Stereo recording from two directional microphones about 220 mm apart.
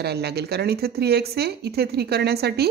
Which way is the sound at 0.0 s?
45° right (ahead or behind).